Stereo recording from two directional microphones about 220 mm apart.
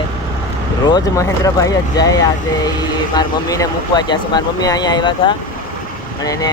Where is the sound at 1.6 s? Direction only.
15° left (ahead or behind).